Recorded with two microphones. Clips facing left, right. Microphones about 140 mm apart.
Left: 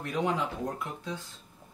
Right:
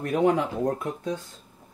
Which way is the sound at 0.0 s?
50° right (ahead or behind).